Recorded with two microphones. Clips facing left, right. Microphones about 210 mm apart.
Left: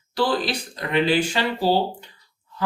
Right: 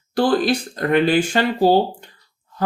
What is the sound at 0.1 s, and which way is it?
Speech, 50° right (ahead or behind).